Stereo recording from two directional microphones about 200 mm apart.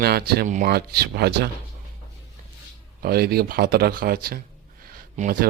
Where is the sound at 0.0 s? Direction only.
50° right (ahead or behind).